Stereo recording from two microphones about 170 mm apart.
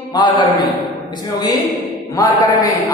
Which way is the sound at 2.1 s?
20° left (ahead or behind).